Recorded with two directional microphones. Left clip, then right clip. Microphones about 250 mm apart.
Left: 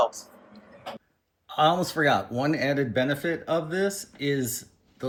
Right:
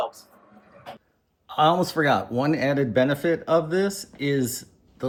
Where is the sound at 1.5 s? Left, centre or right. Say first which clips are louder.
Right 2 dB; centre.